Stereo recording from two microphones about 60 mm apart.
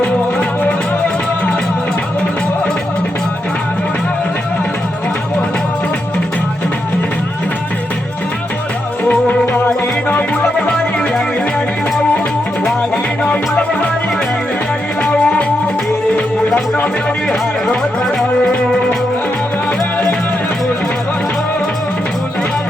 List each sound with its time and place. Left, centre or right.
0.0 s music: left
9.0 s music: left
13.2 s music: left
15.0 s music: centre
16.6 s music: left
18.0 s music: centre